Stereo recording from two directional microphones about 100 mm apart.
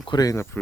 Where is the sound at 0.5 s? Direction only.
20° left (ahead or behind).